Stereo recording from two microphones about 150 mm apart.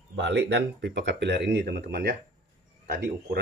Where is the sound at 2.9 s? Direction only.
75° right (ahead or behind).